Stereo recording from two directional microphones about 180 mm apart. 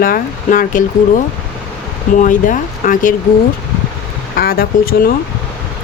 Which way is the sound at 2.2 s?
45° left (ahead or behind).